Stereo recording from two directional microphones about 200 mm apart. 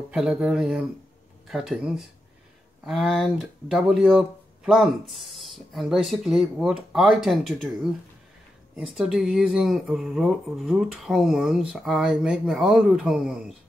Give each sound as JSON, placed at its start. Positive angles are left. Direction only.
{"t": 0.1, "sound": "speech", "side_deg": -5}